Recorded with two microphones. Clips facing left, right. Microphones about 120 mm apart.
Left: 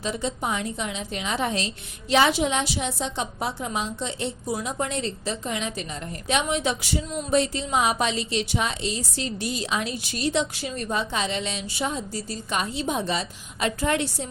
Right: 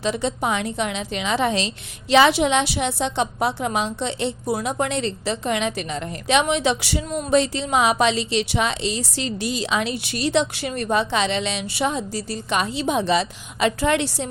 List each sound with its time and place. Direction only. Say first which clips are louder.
0.0 s a woman's voice: right 5 dB; 80° right